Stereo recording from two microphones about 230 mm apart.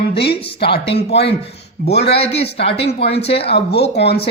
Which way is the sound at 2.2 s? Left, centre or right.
Left.